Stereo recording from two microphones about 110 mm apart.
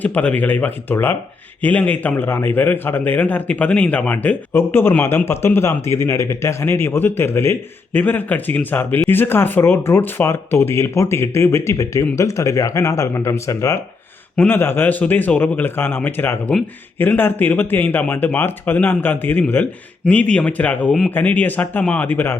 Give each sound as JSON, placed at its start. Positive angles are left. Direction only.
{"t": 0.0, "sound": "a man's voice", "side_deg": 15}